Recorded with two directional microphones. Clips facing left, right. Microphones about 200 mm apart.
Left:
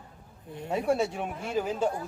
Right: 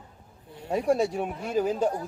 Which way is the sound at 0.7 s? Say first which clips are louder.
Right 3 dB; 35° right (ahead or behind).